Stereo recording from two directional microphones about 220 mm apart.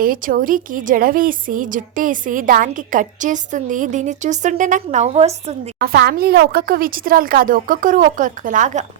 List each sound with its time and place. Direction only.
0.0 s a woman's voice: 40° right (ahead or behind)
5.8 s a woman's voice: 45° right (ahead or behind)